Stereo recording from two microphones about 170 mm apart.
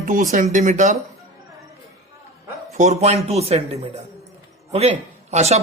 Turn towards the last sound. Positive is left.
turn(degrees=-40)  # may be behind; listen again after turning